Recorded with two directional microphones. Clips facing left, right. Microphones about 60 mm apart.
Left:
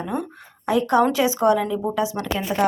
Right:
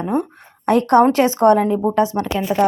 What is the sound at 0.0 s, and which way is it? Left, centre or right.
A woman's voice, right.